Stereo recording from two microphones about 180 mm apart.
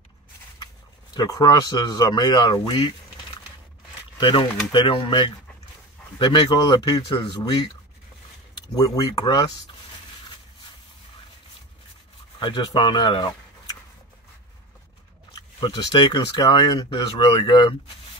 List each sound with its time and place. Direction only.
1.1 s speech: 20° left (ahead or behind)
4.2 s speech: 25° left (ahead or behind)
8.7 s speech: 20° left (ahead or behind)
12.4 s speech: 25° left (ahead or behind)
15.3 s speech: 25° left (ahead or behind)